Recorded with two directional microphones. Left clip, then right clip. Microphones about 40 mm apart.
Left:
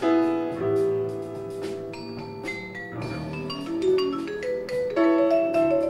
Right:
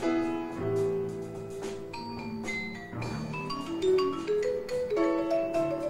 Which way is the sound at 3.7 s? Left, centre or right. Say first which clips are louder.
Left 3 dB; right.